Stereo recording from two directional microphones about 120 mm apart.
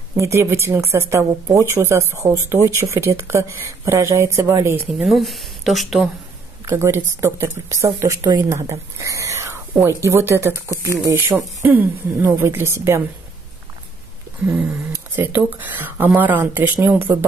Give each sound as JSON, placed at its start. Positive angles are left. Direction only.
{"t": 0.2, "sound": "speech", "side_deg": -25}
{"t": 4.9, "sound": "speech", "side_deg": 0}
{"t": 6.6, "sound": "speech", "side_deg": -20}
{"t": 14.4, "sound": "speech", "side_deg": -15}